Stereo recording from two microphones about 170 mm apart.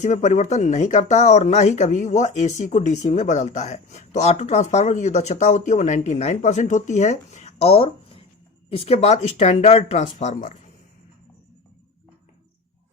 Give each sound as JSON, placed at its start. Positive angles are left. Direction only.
{"t": 0.0, "sound": "speech", "side_deg": 45}